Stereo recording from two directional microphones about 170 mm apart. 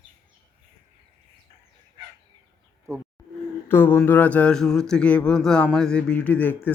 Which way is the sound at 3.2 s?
20° left (ahead or behind).